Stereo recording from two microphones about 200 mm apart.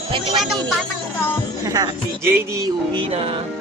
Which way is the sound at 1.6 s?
20° right (ahead or behind).